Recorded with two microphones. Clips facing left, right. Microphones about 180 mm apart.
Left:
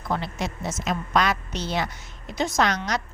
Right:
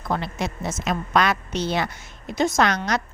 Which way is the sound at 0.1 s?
55° right (ahead or behind).